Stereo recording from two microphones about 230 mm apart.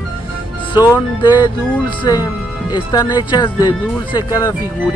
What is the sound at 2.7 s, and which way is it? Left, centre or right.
Speech, centre.